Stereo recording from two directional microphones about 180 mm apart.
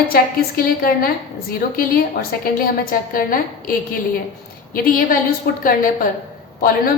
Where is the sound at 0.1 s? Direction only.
55° left (ahead or behind).